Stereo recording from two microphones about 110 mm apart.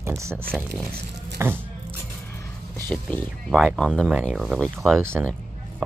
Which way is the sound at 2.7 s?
15° left (ahead or behind).